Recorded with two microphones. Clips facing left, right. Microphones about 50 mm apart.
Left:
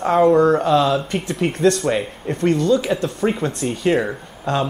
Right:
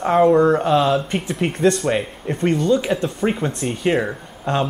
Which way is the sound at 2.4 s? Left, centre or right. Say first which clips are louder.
Left 1 dB; centre.